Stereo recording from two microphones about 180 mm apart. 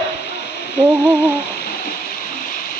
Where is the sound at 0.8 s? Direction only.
5° right (ahead or behind).